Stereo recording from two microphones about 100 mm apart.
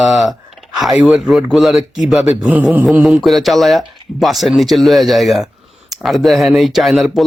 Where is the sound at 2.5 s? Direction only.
15° right (ahead or behind).